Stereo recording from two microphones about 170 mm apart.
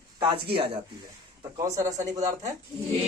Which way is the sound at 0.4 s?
30° right (ahead or behind).